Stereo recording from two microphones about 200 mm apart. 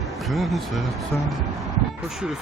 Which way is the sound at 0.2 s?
Centre (ahead or behind).